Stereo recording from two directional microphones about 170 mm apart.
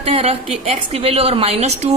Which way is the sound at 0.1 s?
35° right (ahead or behind).